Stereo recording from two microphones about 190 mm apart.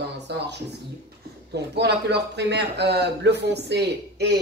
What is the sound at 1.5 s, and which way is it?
Speech, 60° right (ahead or behind).